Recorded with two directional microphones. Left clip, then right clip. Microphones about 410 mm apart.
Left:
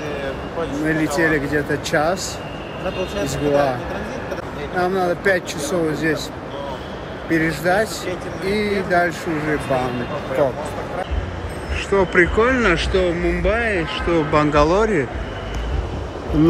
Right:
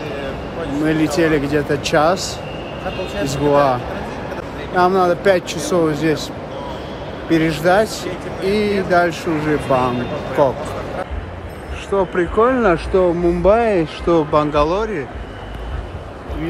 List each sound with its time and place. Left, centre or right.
0.8 s speech: centre
3.3 s speech: centre
4.7 s speech: centre
7.2 s speech: centre
11.9 s speech: centre